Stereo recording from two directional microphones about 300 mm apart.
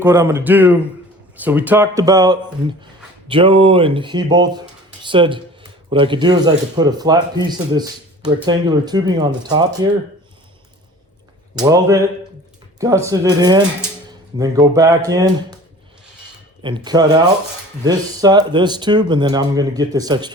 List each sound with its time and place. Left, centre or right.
0.0 s speech: centre
11.5 s speech: centre
16.6 s speech: centre